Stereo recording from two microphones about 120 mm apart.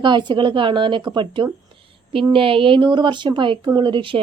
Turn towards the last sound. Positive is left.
turn(degrees=-45)  # may be behind; listen again after turning